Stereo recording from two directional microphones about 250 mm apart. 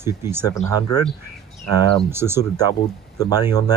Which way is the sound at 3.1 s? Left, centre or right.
Centre.